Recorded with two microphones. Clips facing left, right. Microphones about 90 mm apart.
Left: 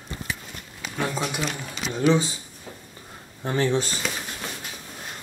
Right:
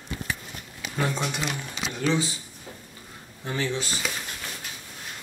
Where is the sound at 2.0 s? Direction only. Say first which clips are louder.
Left 5 dB; 20° left (ahead or behind).